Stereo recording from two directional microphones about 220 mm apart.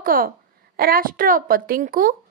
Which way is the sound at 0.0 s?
40° right (ahead or behind).